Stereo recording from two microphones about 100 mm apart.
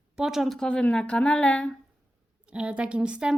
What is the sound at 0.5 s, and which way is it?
Speech, 10° left (ahead or behind).